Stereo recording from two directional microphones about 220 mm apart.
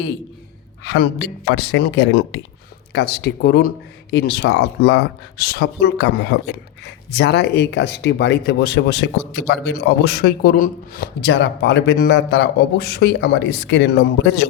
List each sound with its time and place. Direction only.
1.5 s speech: 50° left (ahead or behind)